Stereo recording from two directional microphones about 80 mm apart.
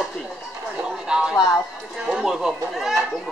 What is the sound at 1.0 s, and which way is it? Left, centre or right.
Speech, centre.